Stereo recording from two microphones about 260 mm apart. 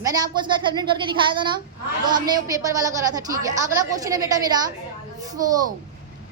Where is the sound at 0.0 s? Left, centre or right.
Centre.